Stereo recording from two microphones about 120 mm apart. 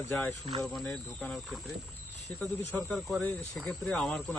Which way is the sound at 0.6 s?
Centre (ahead or behind).